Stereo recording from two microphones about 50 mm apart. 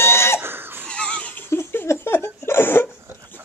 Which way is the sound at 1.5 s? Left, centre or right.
Left.